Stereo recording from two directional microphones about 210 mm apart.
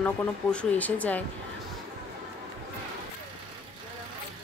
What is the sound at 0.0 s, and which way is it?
Speech, 5° left (ahead or behind).